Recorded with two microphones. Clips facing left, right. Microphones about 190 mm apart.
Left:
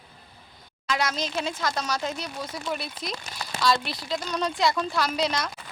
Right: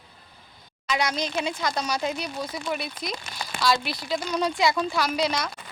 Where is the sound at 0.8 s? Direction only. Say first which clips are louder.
Right 1 dB; centre (ahead or behind).